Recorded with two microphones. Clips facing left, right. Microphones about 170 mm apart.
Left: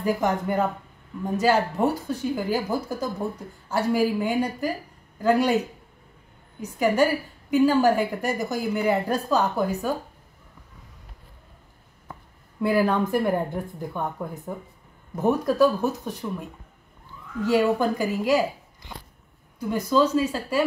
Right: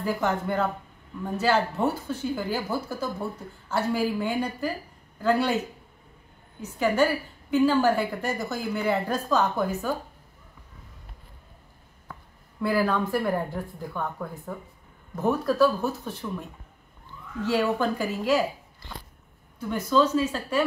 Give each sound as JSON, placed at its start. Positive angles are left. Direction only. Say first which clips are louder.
{"t": 0.0, "sound": "speech", "louder": "left 3 dB", "side_deg": 15}
{"t": 6.6, "sound": "speech", "louder": "left 2 dB", "side_deg": 10}
{"t": 12.6, "sound": "a woman's voice", "louder": "left 3 dB", "side_deg": 20}
{"t": 19.6, "sound": "speech", "louder": "left 1 dB", "side_deg": 10}